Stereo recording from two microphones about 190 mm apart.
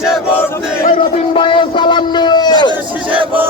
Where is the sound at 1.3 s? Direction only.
25° left (ahead or behind).